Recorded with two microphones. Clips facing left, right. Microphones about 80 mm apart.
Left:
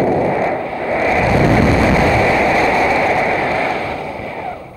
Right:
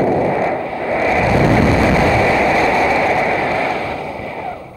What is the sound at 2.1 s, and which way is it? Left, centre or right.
Vehicle, centre.